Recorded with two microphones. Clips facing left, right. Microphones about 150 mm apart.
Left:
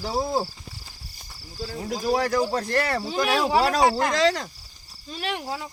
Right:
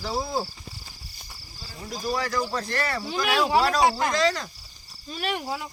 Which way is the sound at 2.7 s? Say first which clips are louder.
Left 4 dB; 40° left (ahead or behind).